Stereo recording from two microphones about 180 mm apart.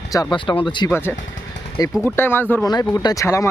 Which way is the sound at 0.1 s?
25° left (ahead or behind).